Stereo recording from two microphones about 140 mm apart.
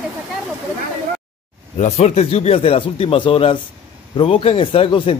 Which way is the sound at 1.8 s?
50° left (ahead or behind).